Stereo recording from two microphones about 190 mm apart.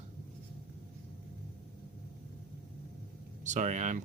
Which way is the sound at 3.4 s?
40° right (ahead or behind).